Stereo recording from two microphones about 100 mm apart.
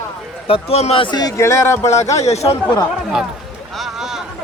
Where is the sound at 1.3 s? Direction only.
30° left (ahead or behind).